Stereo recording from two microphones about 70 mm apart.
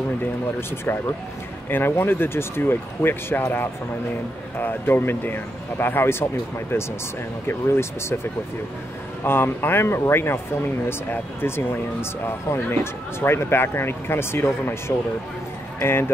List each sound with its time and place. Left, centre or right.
1.7 s speech: left
4.6 s speech: left